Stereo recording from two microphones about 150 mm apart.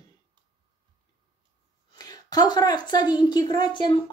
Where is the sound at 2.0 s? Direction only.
25° left (ahead or behind).